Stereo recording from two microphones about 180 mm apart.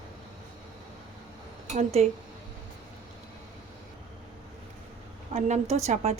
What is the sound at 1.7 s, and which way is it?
Speech, 40° right (ahead or behind).